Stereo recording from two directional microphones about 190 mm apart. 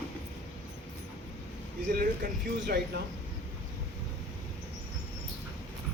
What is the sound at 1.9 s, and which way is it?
Speech, 50° right (ahead or behind).